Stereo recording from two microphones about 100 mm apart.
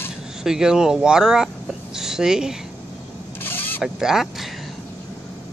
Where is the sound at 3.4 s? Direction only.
20° left (ahead or behind).